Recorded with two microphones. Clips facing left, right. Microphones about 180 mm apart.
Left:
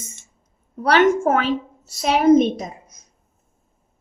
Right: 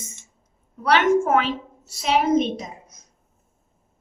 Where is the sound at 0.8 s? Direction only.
40° left (ahead or behind).